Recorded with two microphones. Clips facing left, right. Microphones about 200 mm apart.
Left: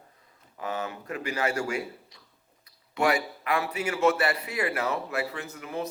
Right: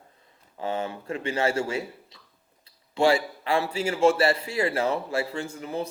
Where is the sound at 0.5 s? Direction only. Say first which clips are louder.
Right 3 dB; 30° right (ahead or behind).